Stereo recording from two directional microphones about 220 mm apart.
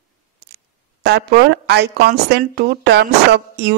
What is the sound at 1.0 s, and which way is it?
A woman's voice, 50° right (ahead or behind).